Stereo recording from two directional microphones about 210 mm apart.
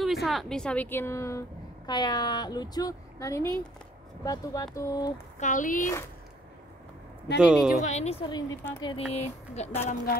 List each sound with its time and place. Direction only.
0.0 s a woman's voice: centre (ahead or behind); by 5.1 s 15° left (ahead or behind)
5.4 s speech: 35° left (ahead or behind)
7.3 s speech: 5° right (ahead or behind)
7.8 s a woman's voice: 30° left (ahead or behind)
8.9 s speech: 30° left (ahead or behind)